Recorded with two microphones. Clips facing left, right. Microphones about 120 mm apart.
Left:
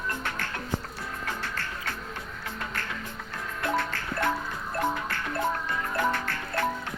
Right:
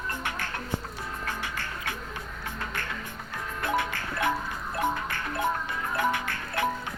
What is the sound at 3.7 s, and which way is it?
Music, 15° right (ahead or behind).